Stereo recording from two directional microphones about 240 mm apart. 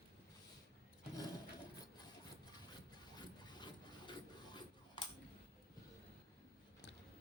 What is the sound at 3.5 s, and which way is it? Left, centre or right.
Printer, centre.